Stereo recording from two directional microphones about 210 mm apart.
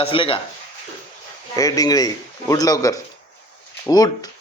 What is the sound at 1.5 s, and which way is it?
Speech, 15° left (ahead or behind).